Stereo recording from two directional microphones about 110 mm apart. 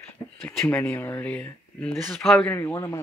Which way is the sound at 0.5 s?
10° left (ahead or behind).